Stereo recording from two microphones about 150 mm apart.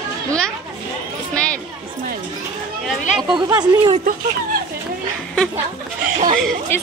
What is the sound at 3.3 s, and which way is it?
Speech, 30° right (ahead or behind).